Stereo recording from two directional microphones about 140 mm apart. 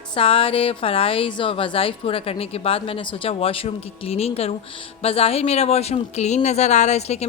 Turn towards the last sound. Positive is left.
turn(degrees=50)  # may be behind; listen again after turning